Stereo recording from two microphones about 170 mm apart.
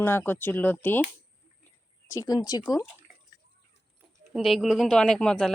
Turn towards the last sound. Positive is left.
turn(degrees=5)  # may be behind; listen again after turning